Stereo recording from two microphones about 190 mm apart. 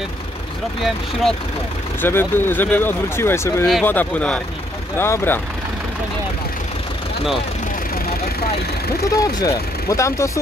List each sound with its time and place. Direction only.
2.0 s speech: 10° left (ahead or behind)
9.1 s speech: 20° left (ahead or behind)